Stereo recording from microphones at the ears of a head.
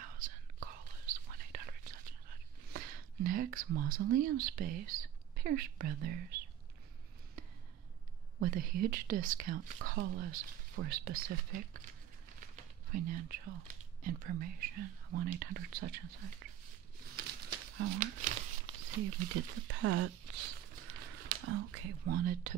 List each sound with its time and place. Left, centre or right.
0.0 s whispering: right
8.4 s speech: right